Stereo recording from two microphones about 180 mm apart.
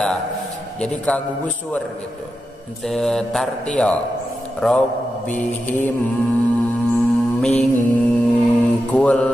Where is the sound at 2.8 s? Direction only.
Centre (ahead or behind).